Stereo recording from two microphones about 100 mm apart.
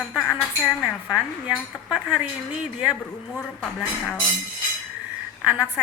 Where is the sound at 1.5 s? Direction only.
15° right (ahead or behind).